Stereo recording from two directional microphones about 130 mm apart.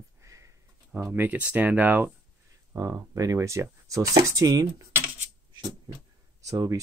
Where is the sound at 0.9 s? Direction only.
15° right (ahead or behind).